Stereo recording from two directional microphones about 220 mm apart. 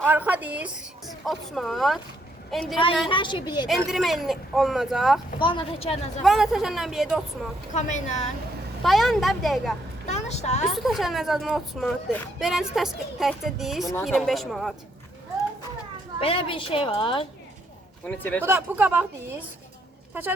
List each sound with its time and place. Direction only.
0.0 s a child's voice: 10° right (ahead or behind)
2.7 s a woman's voice: 20° left (ahead or behind)
3.7 s a child's voice: centre (ahead or behind)
5.4 s a woman's voice: 20° left (ahead or behind)
6.2 s a child's voice: centre (ahead or behind)
7.7 s a woman's voice: 35° left (ahead or behind)
8.8 s a child's voice: centre (ahead or behind)
10.1 s a woman's voice: 30° left (ahead or behind)
10.7 s a child's voice: centre (ahead or behind)
16.2 s a woman's voice: 25° left (ahead or behind)
18.0 s speech: 5° left (ahead or behind)
18.4 s speech: 10° right (ahead or behind)